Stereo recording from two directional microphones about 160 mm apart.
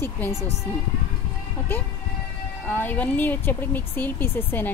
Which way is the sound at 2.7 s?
10° left (ahead or behind).